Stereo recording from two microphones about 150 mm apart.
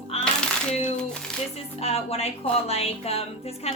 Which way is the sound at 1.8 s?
45° left (ahead or behind).